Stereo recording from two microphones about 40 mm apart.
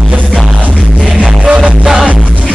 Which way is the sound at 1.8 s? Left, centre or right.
Centre.